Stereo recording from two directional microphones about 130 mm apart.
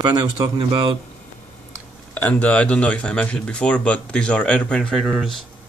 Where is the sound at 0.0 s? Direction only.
30° right (ahead or behind).